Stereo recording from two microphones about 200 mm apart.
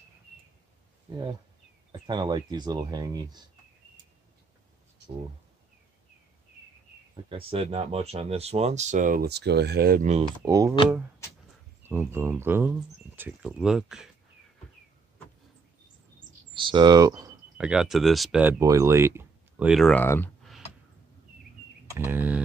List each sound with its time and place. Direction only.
1.9 s speech: 20° right (ahead or behind)
7.2 s speech: 25° right (ahead or behind); by 10.0 s 50° right (ahead or behind)
10.0 s speech: 35° right (ahead or behind)
10.4 s speech: 15° right (ahead or behind)
11.8 s speech: 10° right (ahead or behind)
16.5 s speech: 25° right (ahead or behind)
17.6 s speech: 5° right (ahead or behind)
19.7 s speech: 5° left (ahead or behind)
21.9 s speech: 10° right (ahead or behind)